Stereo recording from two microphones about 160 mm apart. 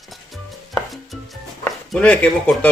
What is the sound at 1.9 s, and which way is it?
Speech, 5° left (ahead or behind).